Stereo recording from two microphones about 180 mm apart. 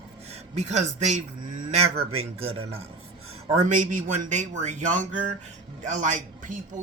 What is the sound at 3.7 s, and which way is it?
Speech, 45° right (ahead or behind).